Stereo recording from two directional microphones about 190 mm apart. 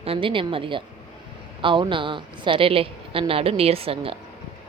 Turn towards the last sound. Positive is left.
turn(degrees=-30)  # may be behind; listen again after turning